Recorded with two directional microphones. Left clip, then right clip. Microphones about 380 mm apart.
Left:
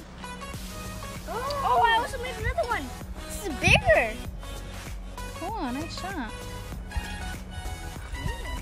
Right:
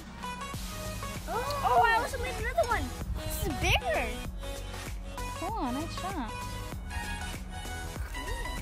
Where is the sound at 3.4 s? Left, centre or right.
Centre.